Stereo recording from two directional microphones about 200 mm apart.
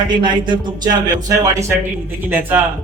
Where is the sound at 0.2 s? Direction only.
25° right (ahead or behind).